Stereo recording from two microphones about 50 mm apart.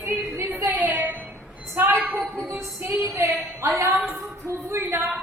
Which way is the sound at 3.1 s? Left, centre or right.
Right.